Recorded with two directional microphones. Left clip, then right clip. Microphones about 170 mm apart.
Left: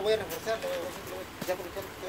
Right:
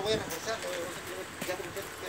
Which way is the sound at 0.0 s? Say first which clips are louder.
Left 3 dB; 55° left (ahead or behind).